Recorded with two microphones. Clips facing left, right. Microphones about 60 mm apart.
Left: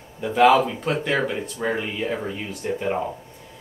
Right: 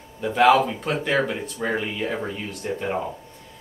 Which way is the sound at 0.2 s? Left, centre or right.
Centre.